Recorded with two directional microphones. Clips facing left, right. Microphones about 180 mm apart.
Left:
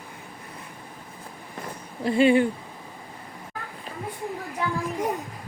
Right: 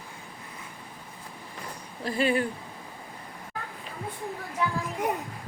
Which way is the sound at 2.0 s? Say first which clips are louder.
Left 7 dB; 25° left (ahead or behind).